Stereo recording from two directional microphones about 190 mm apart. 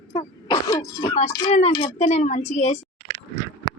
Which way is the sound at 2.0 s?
35° left (ahead or behind).